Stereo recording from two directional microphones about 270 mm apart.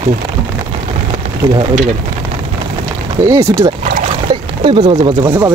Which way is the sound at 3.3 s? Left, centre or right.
Centre.